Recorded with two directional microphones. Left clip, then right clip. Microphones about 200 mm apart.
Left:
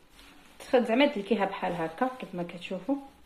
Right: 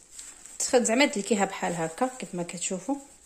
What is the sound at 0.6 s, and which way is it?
Speech, 65° right (ahead or behind).